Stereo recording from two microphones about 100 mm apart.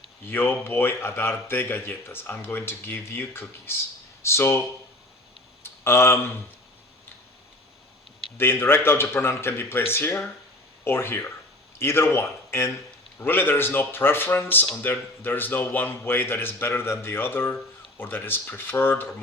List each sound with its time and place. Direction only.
0.3 s speech: 20° left (ahead or behind)
5.6 s speech: 25° left (ahead or behind)
8.4 s speech: 20° left (ahead or behind)